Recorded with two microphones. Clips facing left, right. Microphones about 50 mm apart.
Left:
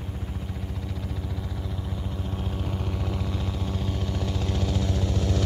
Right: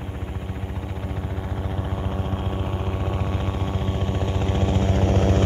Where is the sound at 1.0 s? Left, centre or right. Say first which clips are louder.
Right 4 dB; right.